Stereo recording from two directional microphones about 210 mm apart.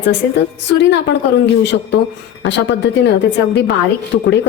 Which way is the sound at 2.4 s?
60° left (ahead or behind).